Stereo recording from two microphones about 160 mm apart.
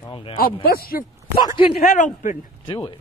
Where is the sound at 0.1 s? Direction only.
35° left (ahead or behind).